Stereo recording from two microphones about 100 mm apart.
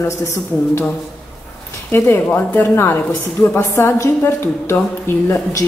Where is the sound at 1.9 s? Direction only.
20° left (ahead or behind).